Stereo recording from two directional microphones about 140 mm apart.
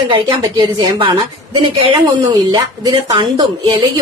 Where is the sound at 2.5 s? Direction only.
35° right (ahead or behind).